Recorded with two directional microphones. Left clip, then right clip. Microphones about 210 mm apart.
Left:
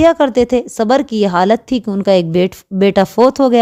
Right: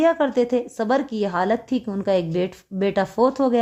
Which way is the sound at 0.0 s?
40° left (ahead or behind).